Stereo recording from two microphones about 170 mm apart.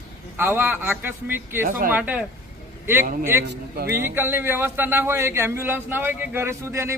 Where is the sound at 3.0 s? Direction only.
55° right (ahead or behind).